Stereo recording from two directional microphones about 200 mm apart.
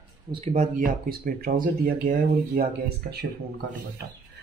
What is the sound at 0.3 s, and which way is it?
Speech, 30° right (ahead or behind).